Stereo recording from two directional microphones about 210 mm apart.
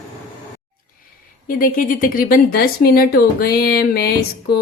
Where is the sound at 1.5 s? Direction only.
40° left (ahead or behind).